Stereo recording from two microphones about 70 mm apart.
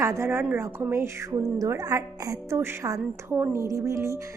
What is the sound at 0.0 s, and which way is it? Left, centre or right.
Speech, right.